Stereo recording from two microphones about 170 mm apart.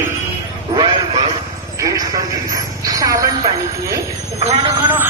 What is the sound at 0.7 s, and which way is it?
Speech, 30° right (ahead or behind).